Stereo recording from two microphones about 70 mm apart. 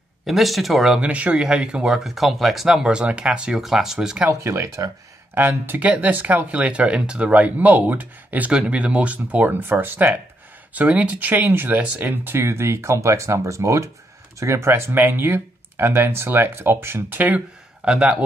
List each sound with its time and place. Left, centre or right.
0.3 s speech: centre
1.0 s speech: centre
2.0 s speech: centre
4.3 s speech: right
5.3 s speech: right
17.8 s speech: centre